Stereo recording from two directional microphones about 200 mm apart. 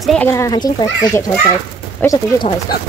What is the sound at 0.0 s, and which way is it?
Speech, 5° left (ahead or behind).